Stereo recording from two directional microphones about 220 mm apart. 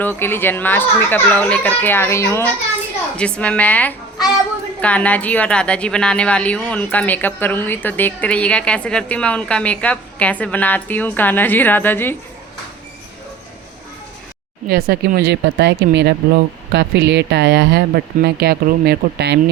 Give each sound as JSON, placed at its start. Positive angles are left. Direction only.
{"t": 0.0, "sound": "a woman's voice", "side_deg": 10}
{"t": 14.7, "sound": "speech", "side_deg": -45}